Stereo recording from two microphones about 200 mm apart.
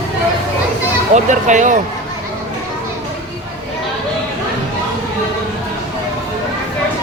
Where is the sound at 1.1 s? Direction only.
40° right (ahead or behind).